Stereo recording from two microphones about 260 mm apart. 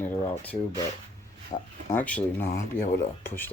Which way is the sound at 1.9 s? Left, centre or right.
Centre.